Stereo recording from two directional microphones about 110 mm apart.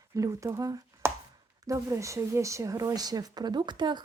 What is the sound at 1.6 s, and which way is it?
Speech, 30° right (ahead or behind).